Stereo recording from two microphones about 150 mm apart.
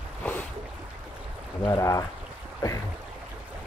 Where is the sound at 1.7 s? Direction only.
20° left (ahead or behind).